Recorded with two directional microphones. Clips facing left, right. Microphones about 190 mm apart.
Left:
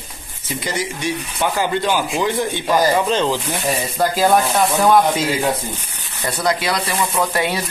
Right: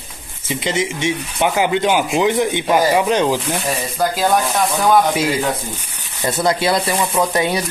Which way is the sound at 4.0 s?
Centre (ahead or behind).